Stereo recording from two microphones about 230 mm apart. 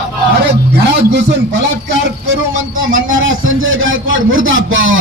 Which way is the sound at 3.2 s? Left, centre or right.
Right.